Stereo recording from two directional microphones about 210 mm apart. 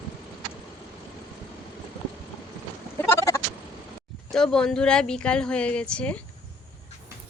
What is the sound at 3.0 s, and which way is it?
Bleat, 15° left (ahead or behind).